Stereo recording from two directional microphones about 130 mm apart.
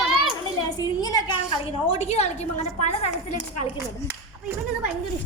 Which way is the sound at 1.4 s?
50° left (ahead or behind).